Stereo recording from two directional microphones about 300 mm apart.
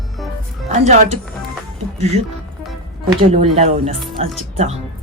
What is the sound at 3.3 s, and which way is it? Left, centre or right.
Speech, right.